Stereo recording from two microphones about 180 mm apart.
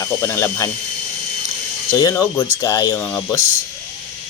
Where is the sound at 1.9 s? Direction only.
20° left (ahead or behind).